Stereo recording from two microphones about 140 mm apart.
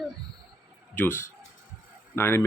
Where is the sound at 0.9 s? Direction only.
15° left (ahead or behind).